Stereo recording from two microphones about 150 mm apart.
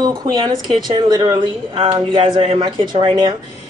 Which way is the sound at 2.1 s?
35° right (ahead or behind).